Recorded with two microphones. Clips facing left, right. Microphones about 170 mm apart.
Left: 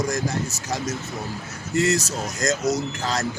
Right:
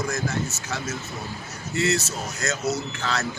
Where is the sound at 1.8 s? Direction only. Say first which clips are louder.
Left 3 dB; 40° left (ahead or behind).